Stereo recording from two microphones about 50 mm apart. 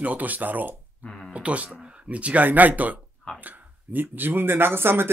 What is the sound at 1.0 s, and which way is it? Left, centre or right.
Speech, centre.